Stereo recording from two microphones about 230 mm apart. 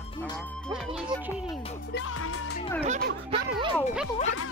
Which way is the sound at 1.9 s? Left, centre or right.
Left.